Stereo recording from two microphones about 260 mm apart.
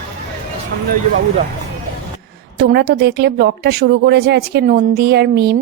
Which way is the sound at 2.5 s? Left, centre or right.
Right.